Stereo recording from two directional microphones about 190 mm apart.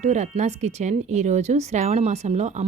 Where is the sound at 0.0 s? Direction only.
40° right (ahead or behind).